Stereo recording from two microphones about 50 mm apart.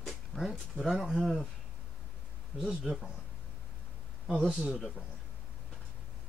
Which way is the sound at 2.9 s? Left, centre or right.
Centre.